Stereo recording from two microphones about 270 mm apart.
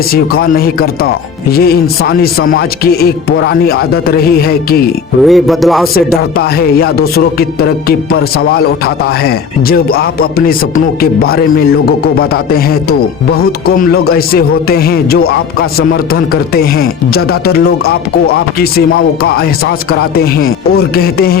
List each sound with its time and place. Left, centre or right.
0.1 s speech: left
5.2 s speech: centre
6.3 s speech: left
19.9 s speech: left